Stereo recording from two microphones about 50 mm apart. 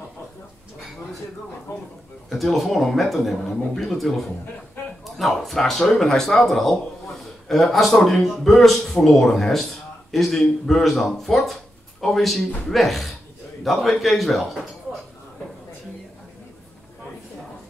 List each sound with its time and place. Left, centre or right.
1.7 s speech: left
2.2 s speech: centre